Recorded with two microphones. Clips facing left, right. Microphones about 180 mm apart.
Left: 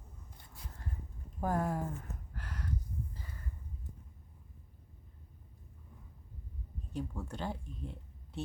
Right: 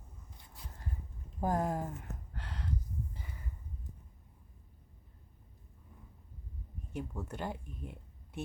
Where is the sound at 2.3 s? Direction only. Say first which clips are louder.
Right 1 dB; 25° right (ahead or behind).